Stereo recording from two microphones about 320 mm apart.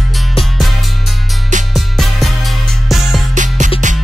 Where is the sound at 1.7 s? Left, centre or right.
Centre.